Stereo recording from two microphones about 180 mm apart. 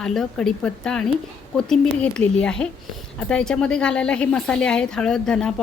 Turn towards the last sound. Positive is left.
turn(degrees=5)  # may be behind; listen again after turning